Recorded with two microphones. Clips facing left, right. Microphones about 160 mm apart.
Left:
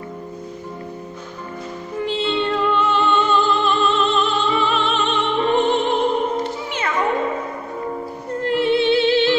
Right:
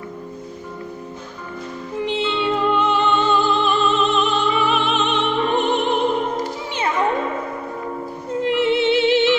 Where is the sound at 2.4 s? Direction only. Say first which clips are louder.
Right 3 dB; 10° right (ahead or behind).